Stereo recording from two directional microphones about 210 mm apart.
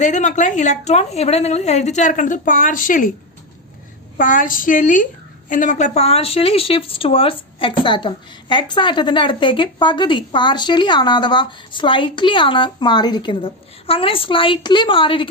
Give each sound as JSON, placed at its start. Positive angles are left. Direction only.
{"t": 0.0, "sound": "a woman's voice", "side_deg": 35}
{"t": 4.2, "sound": "a woman's voice", "side_deg": 40}